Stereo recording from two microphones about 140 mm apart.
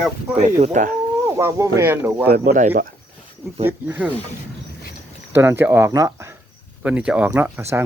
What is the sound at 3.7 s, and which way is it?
Speech, 15° right (ahead or behind).